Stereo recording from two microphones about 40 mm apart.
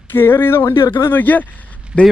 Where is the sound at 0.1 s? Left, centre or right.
Left.